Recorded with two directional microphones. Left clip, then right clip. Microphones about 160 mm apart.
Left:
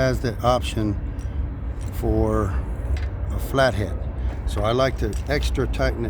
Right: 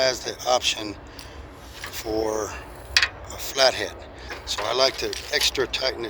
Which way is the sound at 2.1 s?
30° left (ahead or behind).